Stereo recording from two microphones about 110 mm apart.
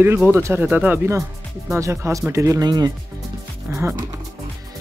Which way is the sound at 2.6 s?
35° right (ahead or behind).